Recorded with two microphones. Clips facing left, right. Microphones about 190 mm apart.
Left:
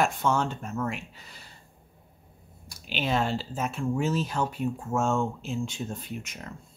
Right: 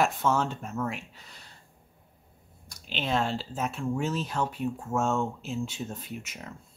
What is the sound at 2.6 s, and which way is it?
Speech, 5° left (ahead or behind).